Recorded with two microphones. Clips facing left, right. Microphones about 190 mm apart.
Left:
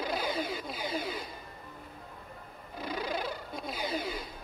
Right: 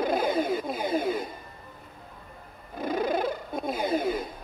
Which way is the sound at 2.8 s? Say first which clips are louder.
Right 8 dB; 50° right (ahead or behind).